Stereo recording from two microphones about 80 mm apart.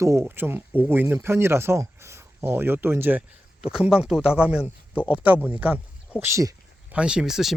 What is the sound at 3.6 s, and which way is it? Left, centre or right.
Speech, centre.